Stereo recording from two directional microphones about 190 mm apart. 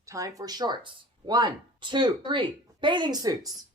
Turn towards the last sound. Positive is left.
turn(degrees=-20)  # may be behind; listen again after turning